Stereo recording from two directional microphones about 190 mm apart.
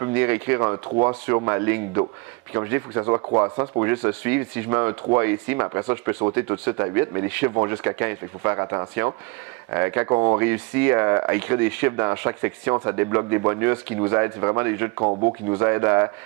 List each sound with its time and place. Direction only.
0.0 s speech: 15° right (ahead or behind)
15.0 s speech: 25° right (ahead or behind)
15.6 s speech: 15° right (ahead or behind)